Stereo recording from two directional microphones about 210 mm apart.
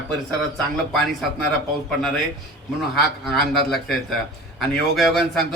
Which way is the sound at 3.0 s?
Centre (ahead or behind).